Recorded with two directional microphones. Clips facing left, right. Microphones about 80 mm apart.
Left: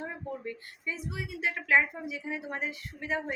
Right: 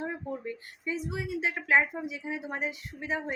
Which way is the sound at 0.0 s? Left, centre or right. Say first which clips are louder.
Right 2 dB; centre.